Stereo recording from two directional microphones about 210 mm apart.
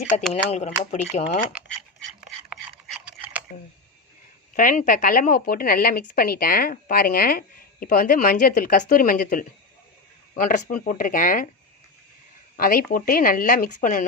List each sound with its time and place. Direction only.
0.2 s speech: 5° left (ahead or behind)
0.5 s speech: 35° left (ahead or behind)
2.5 s a sound: 5° right (ahead or behind)
4.5 s speech: 40° left (ahead or behind)
12.5 s speech: 45° left (ahead or behind)